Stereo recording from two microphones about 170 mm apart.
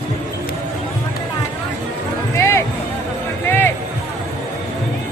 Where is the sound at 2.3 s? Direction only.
15° left (ahead or behind).